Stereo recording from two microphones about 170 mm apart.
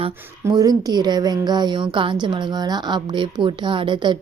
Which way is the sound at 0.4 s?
20° right (ahead or behind).